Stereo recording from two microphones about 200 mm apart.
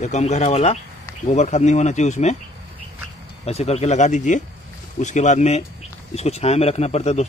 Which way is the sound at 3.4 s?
30° left (ahead or behind).